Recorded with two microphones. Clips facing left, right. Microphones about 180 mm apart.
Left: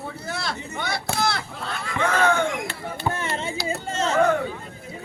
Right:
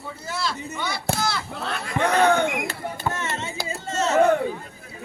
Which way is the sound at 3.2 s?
30° left (ahead or behind).